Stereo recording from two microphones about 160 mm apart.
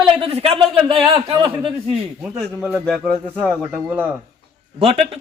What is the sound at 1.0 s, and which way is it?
Speech, 30° right (ahead or behind).